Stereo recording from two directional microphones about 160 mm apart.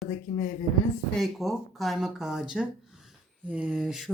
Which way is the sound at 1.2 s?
Centre (ahead or behind).